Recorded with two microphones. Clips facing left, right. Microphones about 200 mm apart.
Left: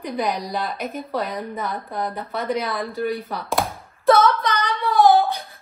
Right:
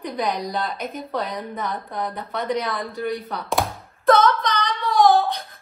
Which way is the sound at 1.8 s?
30° left (ahead or behind).